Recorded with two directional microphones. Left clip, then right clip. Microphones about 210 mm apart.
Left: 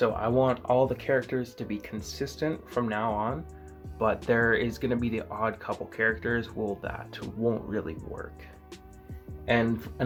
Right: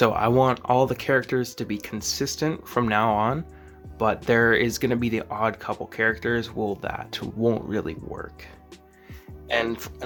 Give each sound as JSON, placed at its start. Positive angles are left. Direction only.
{"t": 0.0, "sound": "speech", "side_deg": -40}
{"t": 9.6, "sound": "speech", "side_deg": -40}